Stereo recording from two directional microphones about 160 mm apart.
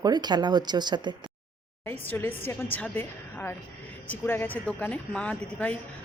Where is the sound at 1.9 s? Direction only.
15° left (ahead or behind).